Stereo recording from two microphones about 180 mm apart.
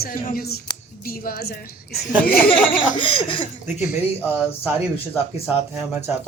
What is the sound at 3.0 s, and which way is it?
Speech, 30° left (ahead or behind).